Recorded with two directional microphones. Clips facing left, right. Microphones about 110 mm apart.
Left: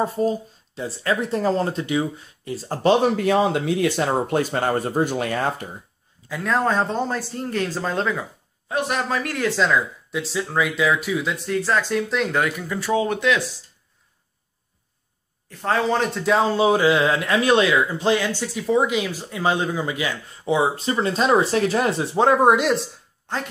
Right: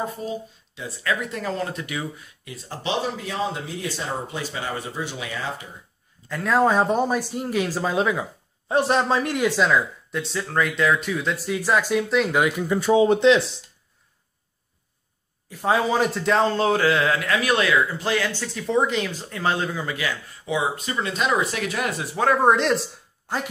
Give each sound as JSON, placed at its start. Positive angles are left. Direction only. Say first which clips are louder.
{"t": 0.0, "sound": "speech", "louder": "left 7 dB", "side_deg": 40}
{"t": 3.1, "sound": "speech", "louder": "left 9 dB", "side_deg": 60}
{"t": 6.2, "sound": "speech", "louder": "right 2 dB", "side_deg": 0}
{"t": 8.6, "sound": "speech", "louder": "right 4 dB", "side_deg": -30}
{"t": 9.6, "sound": "speech", "louder": "even", "side_deg": 0}
{"t": 12.4, "sound": "speech", "louder": "right 2 dB", "side_deg": -20}
{"t": 15.6, "sound": "a man's voice", "louder": "even", "side_deg": -10}
{"t": 20.4, "sound": "speech", "louder": "left 5 dB", "side_deg": 30}
{"t": 22.7, "sound": "speech", "louder": "left 1 dB", "side_deg": 0}